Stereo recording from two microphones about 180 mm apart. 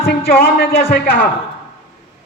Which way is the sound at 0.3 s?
55° left (ahead or behind).